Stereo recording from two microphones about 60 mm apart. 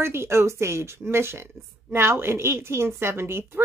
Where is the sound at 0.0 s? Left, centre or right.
Right.